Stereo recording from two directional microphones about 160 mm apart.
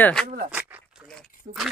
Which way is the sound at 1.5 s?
40° right (ahead or behind).